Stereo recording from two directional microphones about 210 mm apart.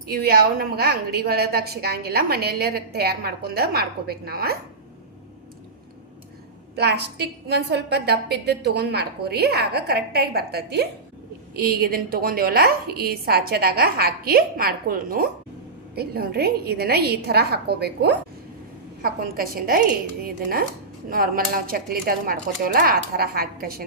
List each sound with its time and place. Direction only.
0.1 s a woman's voice: 45° right (ahead or behind)
6.7 s a woman's voice: 50° right (ahead or behind)